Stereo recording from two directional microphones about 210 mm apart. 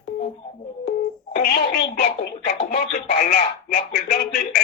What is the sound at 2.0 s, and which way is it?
Speech, 45° left (ahead or behind).